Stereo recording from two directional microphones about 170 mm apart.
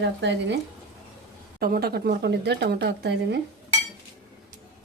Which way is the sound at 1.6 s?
60° right (ahead or behind).